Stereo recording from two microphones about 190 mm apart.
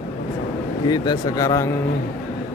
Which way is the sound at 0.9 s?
20° left (ahead or behind).